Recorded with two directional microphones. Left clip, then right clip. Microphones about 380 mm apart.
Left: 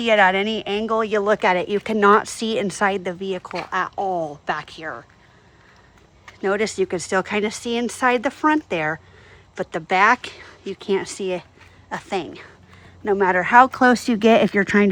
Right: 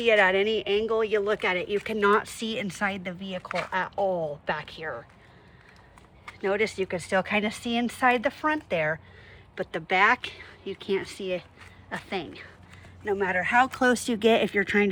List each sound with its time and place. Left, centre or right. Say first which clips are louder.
0.0 s speech: left 5 dB; centre
6.4 s speech: left 5 dB; centre
14.5 s speech: left 6 dB; left